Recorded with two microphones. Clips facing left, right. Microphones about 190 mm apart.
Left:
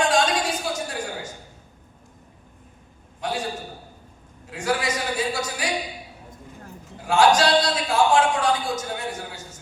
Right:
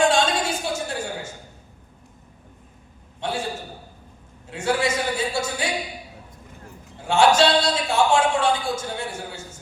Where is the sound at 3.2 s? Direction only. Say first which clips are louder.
Even; 25° right (ahead or behind).